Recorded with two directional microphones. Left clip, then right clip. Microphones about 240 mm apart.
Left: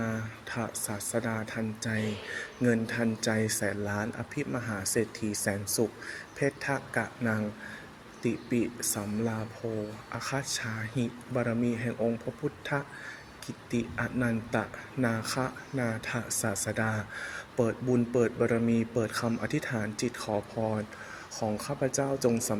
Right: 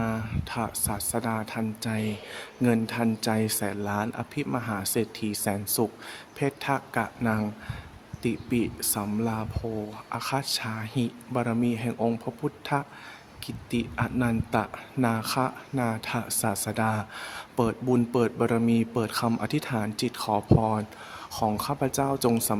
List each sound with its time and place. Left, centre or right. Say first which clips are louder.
0.0 s speech: right 4 dB; right
4.8 s speech: right 1 dB; right
6.4 s speech: right 3 dB; right
8.4 s speech: right 2 dB; right
13.7 s speech: right 3 dB; right
21.3 s speech: right 6 dB; right
21.6 s speech: right 3 dB; right